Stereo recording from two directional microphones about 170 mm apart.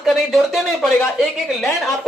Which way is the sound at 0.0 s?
Centre (ahead or behind).